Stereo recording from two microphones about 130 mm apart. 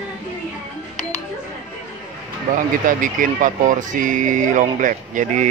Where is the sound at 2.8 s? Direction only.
90° right.